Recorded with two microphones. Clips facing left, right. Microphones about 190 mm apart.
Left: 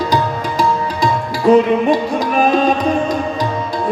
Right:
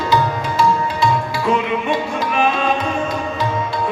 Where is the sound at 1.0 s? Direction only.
40° left (ahead or behind).